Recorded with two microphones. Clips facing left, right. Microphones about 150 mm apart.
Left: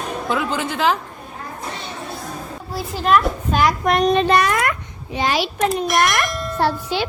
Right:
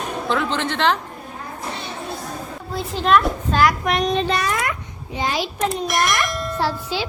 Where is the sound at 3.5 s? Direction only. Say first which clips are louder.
Even; 20° left (ahead or behind).